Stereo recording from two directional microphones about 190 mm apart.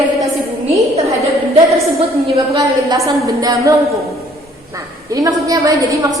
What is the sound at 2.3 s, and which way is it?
A woman's voice, 20° right (ahead or behind).